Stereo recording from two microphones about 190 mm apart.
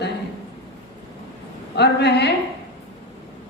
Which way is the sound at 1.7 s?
60° left (ahead or behind).